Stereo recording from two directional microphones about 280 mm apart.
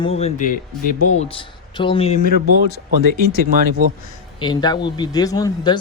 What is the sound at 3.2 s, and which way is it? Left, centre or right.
Speech, right.